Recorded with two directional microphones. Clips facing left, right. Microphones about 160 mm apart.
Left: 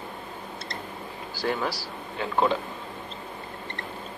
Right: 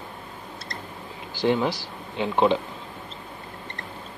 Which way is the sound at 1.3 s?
20° right (ahead or behind).